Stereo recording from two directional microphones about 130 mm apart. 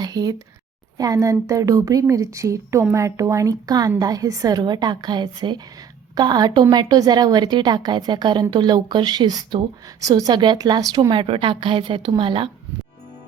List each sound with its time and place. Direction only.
0.0 s a sound: 30° right (ahead or behind)
0.9 s a woman's voice: 25° right (ahead or behind)
11.1 s a woman's voice: 45° right (ahead or behind)